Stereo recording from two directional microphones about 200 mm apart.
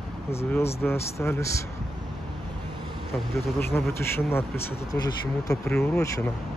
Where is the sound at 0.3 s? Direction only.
15° left (ahead or behind).